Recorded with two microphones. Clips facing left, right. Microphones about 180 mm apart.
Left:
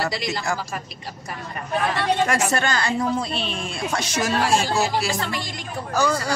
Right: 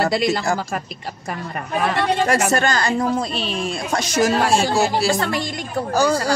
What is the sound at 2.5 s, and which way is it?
Speech, 40° right (ahead or behind).